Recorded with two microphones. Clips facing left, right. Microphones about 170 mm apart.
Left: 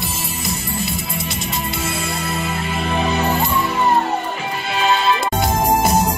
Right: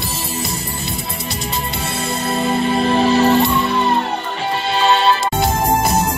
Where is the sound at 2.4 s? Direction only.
30° right (ahead or behind).